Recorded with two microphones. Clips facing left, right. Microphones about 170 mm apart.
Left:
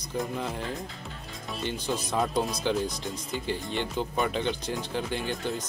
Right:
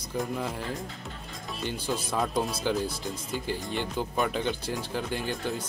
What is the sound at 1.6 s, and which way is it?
Speech, 10° right (ahead or behind).